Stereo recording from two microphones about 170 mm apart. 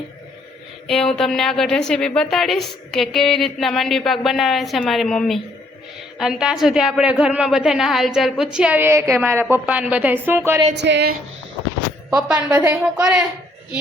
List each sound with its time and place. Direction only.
0.9 s a woman's voice: 5° left (ahead or behind); by 10.7 s 15° right (ahead or behind)
10.8 s speech: 85° right
12.5 s a woman's voice: 5° right (ahead or behind)